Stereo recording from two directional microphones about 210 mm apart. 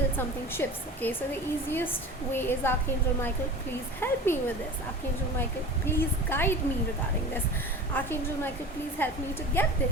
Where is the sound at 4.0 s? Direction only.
10° left (ahead or behind).